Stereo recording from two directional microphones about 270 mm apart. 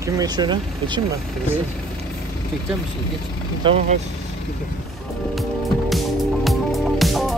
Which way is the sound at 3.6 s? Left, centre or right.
Right.